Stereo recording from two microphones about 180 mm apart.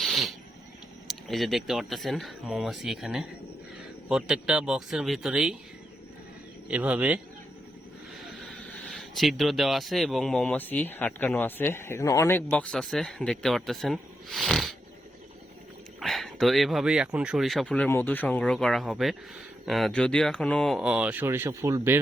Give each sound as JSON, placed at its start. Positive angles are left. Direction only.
{"t": 0.0, "sound": "a sound", "side_deg": 0}
{"t": 1.3, "sound": "speech", "side_deg": 0}
{"t": 6.7, "sound": "speech", "side_deg": -5}
{"t": 8.8, "sound": "speech", "side_deg": 0}
{"t": 16.0, "sound": "speech", "side_deg": 0}